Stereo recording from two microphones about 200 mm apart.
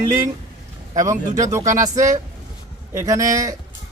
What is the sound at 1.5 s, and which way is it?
A man's voice, 15° right (ahead or behind).